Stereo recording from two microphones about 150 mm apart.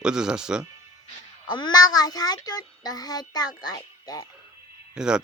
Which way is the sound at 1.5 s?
30° left (ahead or behind).